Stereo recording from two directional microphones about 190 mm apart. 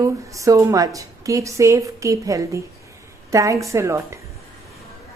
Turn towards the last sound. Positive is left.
turn(degrees=-15)  # may be behind; listen again after turning